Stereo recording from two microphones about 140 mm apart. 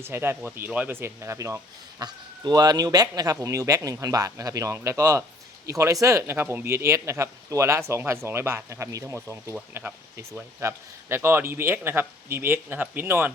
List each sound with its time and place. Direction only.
0.0 s speech: 15° right (ahead or behind)